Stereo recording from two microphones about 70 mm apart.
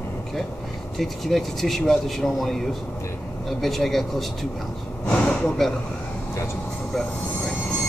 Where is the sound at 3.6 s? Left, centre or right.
Centre.